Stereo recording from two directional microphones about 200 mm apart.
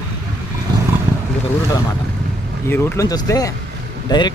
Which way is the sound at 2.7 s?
10° left (ahead or behind).